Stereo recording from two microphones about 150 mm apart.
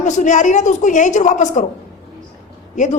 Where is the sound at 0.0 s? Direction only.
55° left (ahead or behind).